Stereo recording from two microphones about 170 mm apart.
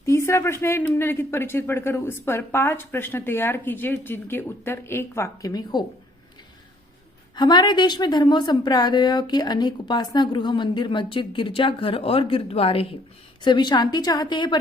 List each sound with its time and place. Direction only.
0.0 s speech: 15° left (ahead or behind)
7.3 s a woman's voice: 25° left (ahead or behind)